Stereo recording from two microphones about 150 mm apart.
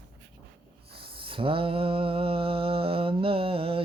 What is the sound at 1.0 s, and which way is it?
Mantra, 35° right (ahead or behind).